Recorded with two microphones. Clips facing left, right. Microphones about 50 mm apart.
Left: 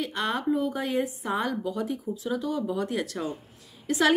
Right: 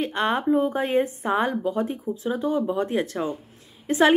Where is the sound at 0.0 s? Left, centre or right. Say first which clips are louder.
Right 5 dB; right.